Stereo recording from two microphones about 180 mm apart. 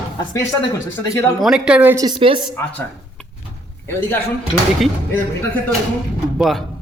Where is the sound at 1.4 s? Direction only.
5° right (ahead or behind).